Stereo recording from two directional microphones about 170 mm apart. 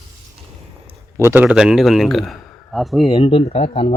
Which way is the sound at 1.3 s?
5° right (ahead or behind).